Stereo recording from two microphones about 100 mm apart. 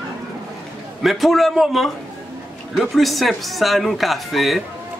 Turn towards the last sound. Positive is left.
turn(degrees=0)  # may be behind; listen again after turning